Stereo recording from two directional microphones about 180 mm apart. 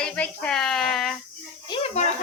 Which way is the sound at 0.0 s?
5° left (ahead or behind).